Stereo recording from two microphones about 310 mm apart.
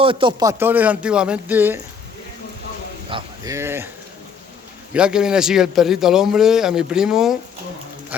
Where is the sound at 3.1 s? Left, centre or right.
Centre.